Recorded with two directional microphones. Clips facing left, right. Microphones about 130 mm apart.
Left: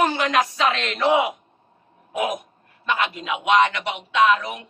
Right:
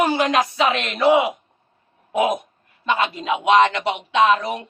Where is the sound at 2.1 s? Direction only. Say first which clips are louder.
Right 5 dB; 30° right (ahead or behind).